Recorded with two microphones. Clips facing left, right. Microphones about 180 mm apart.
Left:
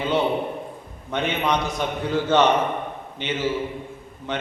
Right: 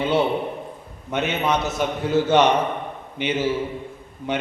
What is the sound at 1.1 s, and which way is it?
A man's voice, 5° right (ahead or behind).